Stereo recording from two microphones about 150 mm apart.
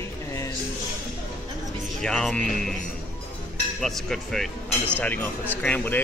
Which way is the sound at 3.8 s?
Centre (ahead or behind).